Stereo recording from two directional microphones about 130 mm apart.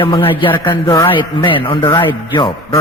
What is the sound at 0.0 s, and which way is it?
A man's voice, 40° left (ahead or behind).